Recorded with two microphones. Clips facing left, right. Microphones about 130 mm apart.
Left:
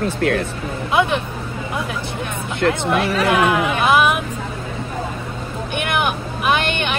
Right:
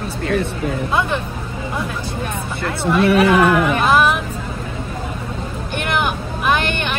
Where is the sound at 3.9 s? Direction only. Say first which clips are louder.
Even; 15° left (ahead or behind).